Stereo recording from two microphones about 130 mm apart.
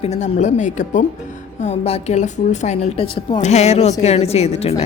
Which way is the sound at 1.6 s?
55° left (ahead or behind).